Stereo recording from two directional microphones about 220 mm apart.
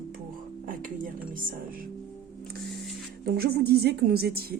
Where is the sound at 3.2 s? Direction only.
45° right (ahead or behind).